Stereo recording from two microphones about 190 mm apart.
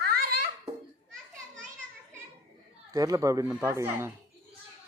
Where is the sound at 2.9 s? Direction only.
20° right (ahead or behind).